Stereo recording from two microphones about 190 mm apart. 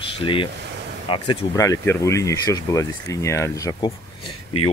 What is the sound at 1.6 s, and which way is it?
Speech, 15° left (ahead or behind).